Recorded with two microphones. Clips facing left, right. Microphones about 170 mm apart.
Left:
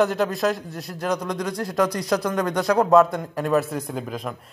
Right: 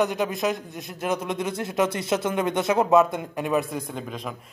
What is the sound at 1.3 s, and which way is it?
Speech, 25° right (ahead or behind).